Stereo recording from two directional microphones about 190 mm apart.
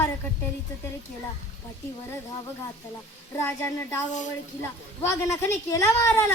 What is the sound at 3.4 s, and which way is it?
Child singing, 15° left (ahead or behind).